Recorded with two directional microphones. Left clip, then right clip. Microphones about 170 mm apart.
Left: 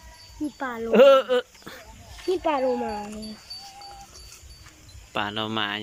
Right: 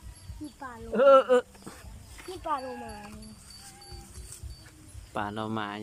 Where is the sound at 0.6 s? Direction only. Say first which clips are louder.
Left 12 dB; 35° left (ahead or behind).